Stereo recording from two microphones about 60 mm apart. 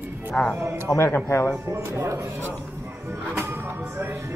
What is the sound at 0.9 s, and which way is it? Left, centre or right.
Speech, left.